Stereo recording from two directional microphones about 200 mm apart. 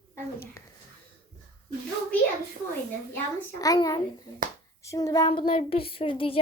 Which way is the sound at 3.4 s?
15° left (ahead or behind).